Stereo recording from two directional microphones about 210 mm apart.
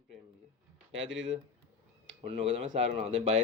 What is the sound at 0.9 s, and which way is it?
Speech, 65° right (ahead or behind).